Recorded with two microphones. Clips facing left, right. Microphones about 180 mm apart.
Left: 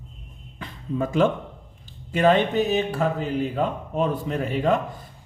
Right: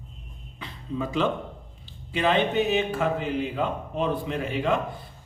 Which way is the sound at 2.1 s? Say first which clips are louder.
Left 4 dB; 45° left (ahead or behind).